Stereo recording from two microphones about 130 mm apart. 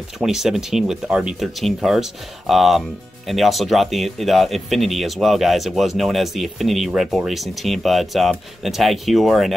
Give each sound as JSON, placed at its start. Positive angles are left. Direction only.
{"t": 0.2, "sound": "speech", "side_deg": -5}